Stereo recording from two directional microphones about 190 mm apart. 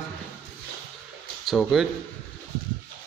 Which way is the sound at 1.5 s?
Centre (ahead or behind).